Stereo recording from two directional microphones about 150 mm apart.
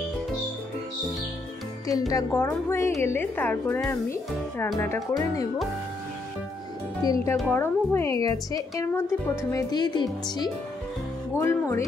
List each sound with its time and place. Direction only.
1.9 s a woman's voice: 25° left (ahead or behind)
7.0 s a woman's voice: 25° left (ahead or behind)
7.3 s a woman's voice: 10° left (ahead or behind)